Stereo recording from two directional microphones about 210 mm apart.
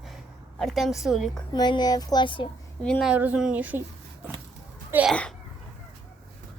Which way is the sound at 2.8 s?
Centre (ahead or behind).